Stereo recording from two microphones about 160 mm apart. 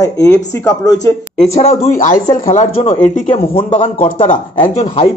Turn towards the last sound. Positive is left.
turn(degrees=55)  # may be behind; listen again after turning